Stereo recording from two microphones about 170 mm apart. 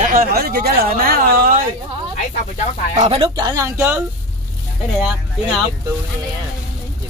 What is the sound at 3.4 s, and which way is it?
Speech, 20° right (ahead or behind).